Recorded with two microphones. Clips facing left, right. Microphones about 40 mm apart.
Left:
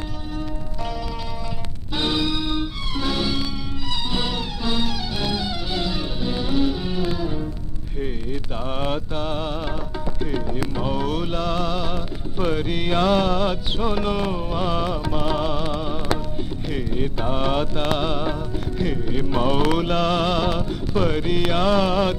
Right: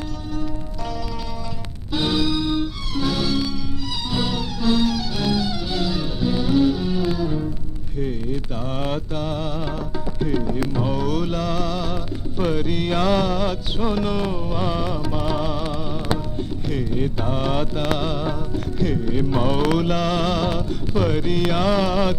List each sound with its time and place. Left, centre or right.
1.9 s music: centre
7.9 s mantra: centre
9.3 s music: left
10.2 s music: centre